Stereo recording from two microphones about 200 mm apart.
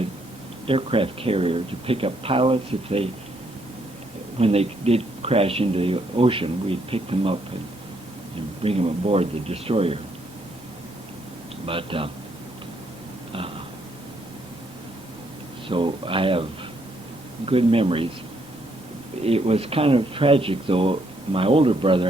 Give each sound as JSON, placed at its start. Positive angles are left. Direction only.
{"t": 0.7, "sound": "speech", "side_deg": -25}
{"t": 4.4, "sound": "speech", "side_deg": -30}
{"t": 8.6, "sound": "speech", "side_deg": -30}
{"t": 11.6, "sound": "speech", "side_deg": -25}
{"t": 15.7, "sound": "speech", "side_deg": -25}
{"t": 19.2, "sound": "speech", "side_deg": -30}